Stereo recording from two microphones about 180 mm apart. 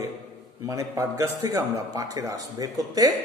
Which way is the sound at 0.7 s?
15° right (ahead or behind).